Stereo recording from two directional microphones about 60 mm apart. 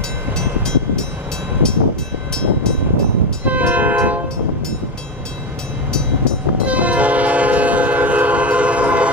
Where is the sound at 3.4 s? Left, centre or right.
Right.